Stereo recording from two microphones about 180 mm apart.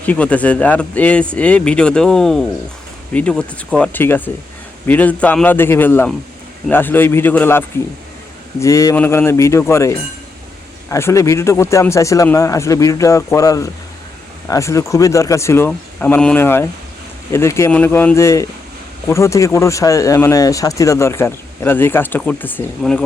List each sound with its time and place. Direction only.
0.0 s speech: 10° left (ahead or behind)